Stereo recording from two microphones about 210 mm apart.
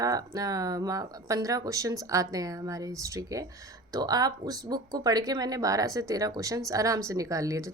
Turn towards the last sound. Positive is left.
turn(degrees=-15)  # may be behind; listen again after turning